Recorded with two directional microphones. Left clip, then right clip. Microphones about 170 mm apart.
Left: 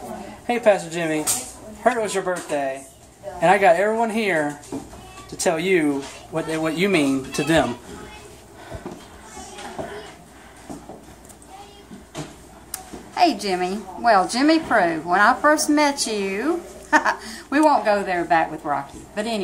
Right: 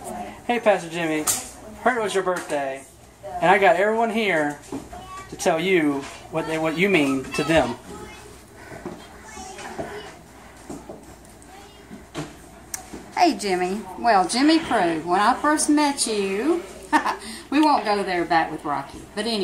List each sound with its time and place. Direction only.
0.5 s speech: 10° left (ahead or behind)
7.3 s speech: 25° left (ahead or behind)
12.7 s a woman's voice: 5° left (ahead or behind)